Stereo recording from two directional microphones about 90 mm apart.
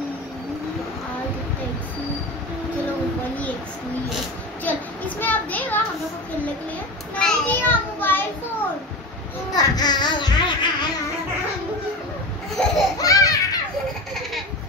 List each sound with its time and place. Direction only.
4.6 s a sound: 20° left (ahead or behind)
7.2 s a sound: 10° left (ahead or behind)
7.6 s child singing: 25° left (ahead or behind)
9.5 s speech: 50° left (ahead or behind)
12.6 s laughter: 10° left (ahead or behind)
13.0 s baby laughter: 40° left (ahead or behind)